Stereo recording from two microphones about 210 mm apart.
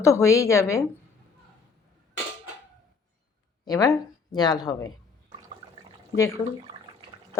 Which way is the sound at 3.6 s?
15° left (ahead or behind).